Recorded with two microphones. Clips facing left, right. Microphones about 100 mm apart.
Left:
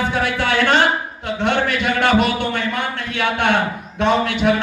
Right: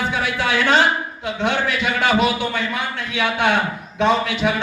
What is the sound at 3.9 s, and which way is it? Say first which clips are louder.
Speech: left 1 dB; 55° left (ahead or behind).